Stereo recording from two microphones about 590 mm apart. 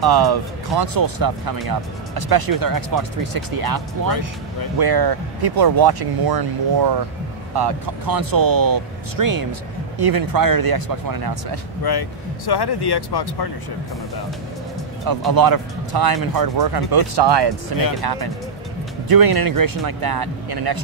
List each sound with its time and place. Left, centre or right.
0.0 s speech: right
11.8 s speech: left
15.0 s speech: right